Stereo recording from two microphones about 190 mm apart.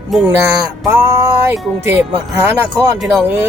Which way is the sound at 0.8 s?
20° right (ahead or behind).